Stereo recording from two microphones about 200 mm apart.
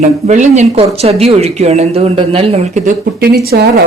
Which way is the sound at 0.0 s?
35° right (ahead or behind).